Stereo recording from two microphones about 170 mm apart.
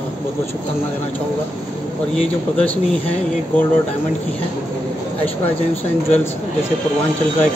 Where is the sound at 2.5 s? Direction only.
10° left (ahead or behind).